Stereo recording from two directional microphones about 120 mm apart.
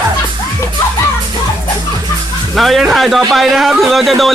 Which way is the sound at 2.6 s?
Centre (ahead or behind).